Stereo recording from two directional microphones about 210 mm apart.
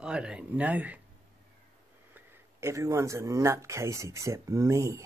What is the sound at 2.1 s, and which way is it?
Speech, 10° right (ahead or behind).